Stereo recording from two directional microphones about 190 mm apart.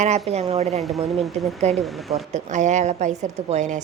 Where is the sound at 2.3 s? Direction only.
40° right (ahead or behind).